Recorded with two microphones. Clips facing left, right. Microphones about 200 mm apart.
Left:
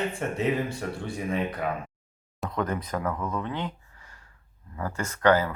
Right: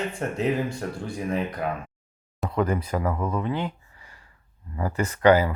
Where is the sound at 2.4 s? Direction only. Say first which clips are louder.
Right 4 dB; 5° right (ahead or behind).